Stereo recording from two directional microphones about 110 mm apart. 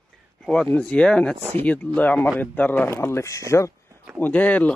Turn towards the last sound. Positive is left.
turn(degrees=15)  # may be behind; listen again after turning